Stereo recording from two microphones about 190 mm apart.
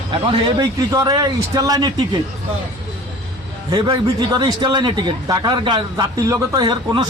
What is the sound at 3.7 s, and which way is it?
Speech, 20° right (ahead or behind).